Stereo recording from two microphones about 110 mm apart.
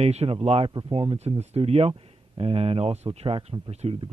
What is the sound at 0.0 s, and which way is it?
Speech, 70° right (ahead or behind).